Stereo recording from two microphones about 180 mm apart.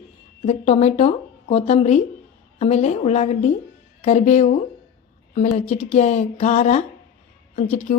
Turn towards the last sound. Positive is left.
turn(degrees=35)  # may be behind; listen again after turning